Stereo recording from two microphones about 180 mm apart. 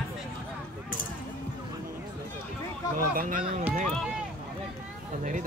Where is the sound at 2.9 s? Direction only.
50° right (ahead or behind).